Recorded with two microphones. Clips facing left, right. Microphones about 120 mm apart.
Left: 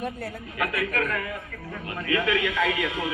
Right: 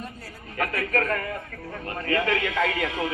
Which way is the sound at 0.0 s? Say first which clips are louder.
Left 7 dB; 60° left (ahead or behind).